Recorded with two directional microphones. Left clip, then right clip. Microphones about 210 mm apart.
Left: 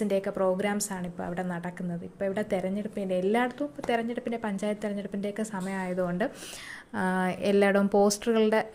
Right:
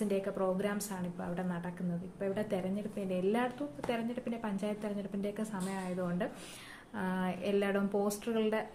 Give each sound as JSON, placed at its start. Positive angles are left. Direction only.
{"t": 0.1, "sound": "speech", "side_deg": 35}